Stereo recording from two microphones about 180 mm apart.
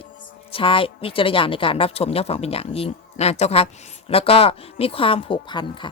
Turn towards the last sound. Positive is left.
turn(degrees=25)  # may be behind; listen again after turning